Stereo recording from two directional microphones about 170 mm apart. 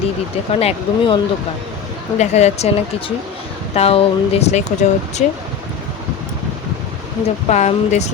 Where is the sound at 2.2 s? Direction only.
40° left (ahead or behind).